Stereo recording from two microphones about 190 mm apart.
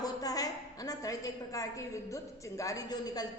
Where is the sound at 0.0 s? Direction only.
20° left (ahead or behind).